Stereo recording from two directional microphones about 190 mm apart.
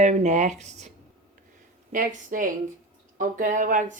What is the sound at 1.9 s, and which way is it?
Speech, 45° right (ahead or behind).